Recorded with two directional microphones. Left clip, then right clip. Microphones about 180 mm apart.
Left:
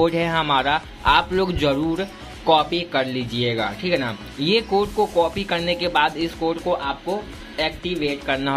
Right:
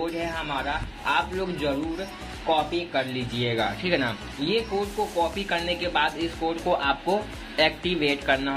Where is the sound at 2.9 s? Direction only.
25° left (ahead or behind).